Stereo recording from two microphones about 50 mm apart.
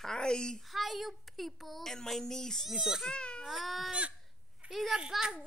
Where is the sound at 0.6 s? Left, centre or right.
Centre.